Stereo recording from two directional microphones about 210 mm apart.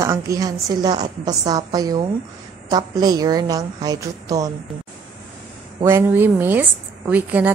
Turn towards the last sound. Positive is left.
turn(degrees=-5)  # may be behind; listen again after turning